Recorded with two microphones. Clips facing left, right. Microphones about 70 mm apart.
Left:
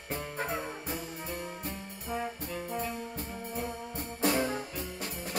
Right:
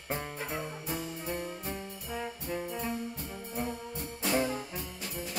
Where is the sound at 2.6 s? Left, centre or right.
Left.